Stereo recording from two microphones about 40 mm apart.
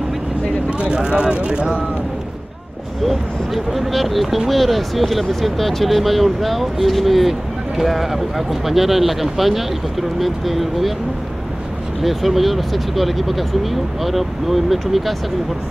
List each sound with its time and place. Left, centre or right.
0.7 s vehicle: right
3.1 s speech: centre
12.0 s speech: centre